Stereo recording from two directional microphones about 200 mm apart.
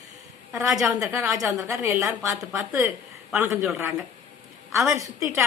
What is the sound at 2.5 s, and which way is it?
A woman's voice, centre (ahead or behind).